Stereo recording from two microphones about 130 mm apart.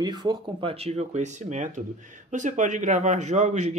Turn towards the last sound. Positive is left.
turn(degrees=-65)  # may be behind; listen again after turning